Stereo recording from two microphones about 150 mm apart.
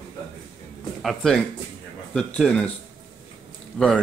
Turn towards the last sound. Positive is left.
turn(degrees=5)  # may be behind; listen again after turning